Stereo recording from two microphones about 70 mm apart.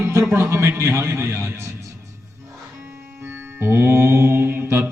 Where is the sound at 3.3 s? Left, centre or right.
Right.